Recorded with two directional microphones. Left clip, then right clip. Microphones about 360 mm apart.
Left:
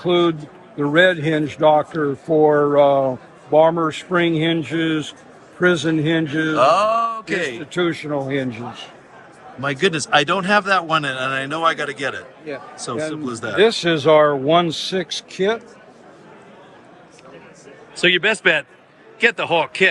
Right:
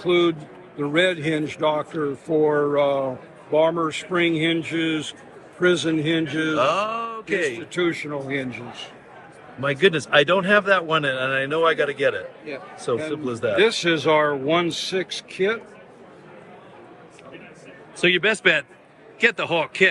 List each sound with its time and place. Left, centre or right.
0.0 s a man's voice: left
6.6 s a man's voice: centre
7.5 s a man's voice: left
9.6 s a man's voice: centre
13.6 s a man's voice: left
18.0 s a man's voice: centre